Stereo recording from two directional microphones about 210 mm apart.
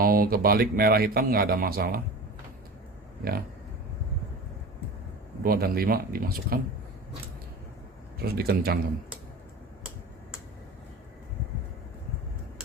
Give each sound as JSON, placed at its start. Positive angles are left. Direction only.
{"t": 0.0, "sound": "speech", "side_deg": -45}
{"t": 5.4, "sound": "speech", "side_deg": -45}
{"t": 8.2, "sound": "speech", "side_deg": -45}